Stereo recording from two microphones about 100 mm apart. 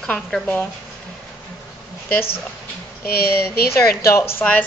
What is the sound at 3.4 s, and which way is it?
A woman's voice, 30° left (ahead or behind).